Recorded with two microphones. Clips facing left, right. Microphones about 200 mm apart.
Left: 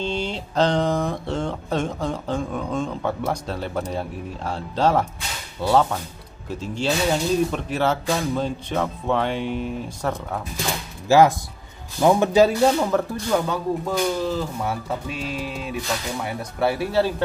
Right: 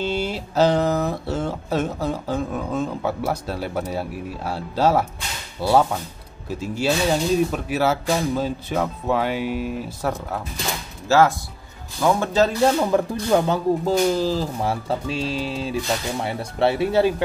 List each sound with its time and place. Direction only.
0.0 s speech: 5° right (ahead or behind)
11.1 s speech: 15° left (ahead or behind)
12.6 s speech: 5° right (ahead or behind)
13.3 s speech: 30° right (ahead or behind)